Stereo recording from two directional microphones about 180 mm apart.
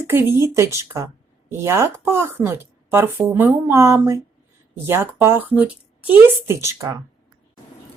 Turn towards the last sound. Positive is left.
turn(degrees=-20)  # may be behind; listen again after turning